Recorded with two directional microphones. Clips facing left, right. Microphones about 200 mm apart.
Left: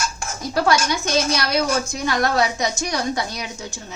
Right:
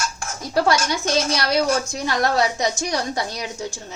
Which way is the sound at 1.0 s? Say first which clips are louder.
Even; 30° right (ahead or behind).